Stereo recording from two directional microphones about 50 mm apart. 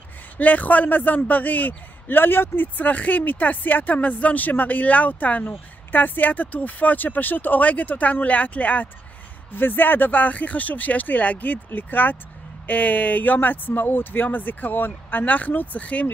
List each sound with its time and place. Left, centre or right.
0.4 s a man's voice: left
9.5 s a man's voice: left